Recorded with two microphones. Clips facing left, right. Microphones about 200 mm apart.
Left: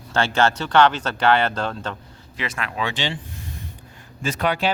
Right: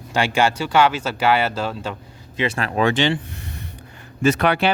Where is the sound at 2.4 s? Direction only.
35° right (ahead or behind).